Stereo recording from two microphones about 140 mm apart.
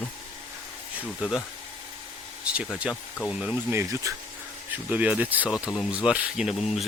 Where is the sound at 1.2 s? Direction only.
Centre (ahead or behind).